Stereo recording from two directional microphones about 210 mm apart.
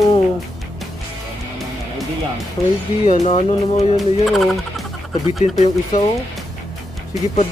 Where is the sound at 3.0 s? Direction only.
30° left (ahead or behind).